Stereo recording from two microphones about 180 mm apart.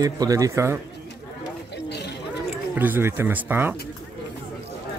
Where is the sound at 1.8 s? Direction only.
65° left (ahead or behind).